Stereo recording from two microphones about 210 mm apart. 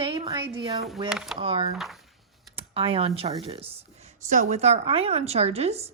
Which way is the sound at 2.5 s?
25° right (ahead or behind).